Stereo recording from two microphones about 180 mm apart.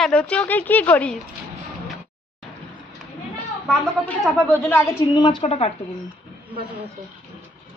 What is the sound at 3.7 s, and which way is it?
A woman's voice, 5° left (ahead or behind).